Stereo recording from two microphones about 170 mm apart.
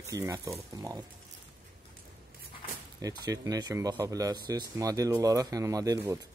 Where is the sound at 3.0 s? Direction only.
20° right (ahead or behind).